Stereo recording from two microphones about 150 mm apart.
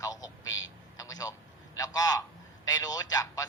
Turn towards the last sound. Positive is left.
turn(degrees=20)  # may be behind; listen again after turning